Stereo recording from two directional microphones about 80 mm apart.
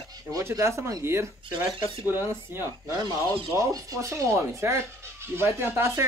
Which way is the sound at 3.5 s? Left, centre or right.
Right.